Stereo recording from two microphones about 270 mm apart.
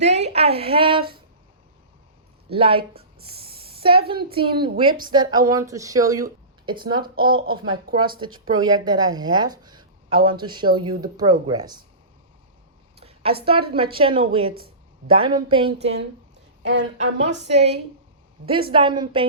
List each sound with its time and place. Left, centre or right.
0.0 s a woman's voice: right
2.5 s a woman's voice: centre
3.4 s a sound: right
4.1 s speech: centre
13.0 s a sound: right
13.4 s a woman's voice: centre
16.6 s a woman's voice: right
17.5 s a woman's voice: right